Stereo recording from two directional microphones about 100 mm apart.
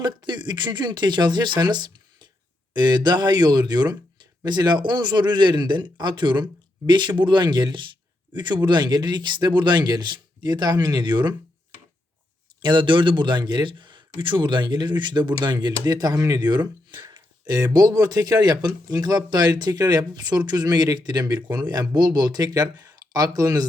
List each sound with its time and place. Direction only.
0.0 s speech: 50° right (ahead or behind)
12.6 s speech: 55° right (ahead or behind); by 23.6 s 35° right (ahead or behind)